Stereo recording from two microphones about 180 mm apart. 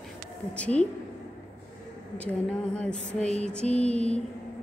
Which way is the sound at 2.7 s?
5° left (ahead or behind).